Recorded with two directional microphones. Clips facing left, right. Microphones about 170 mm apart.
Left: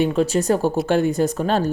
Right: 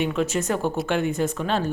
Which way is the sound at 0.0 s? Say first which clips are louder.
Left 5 dB; 35° left (ahead or behind).